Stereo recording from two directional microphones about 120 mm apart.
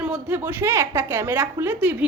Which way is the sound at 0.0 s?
10° right (ahead or behind).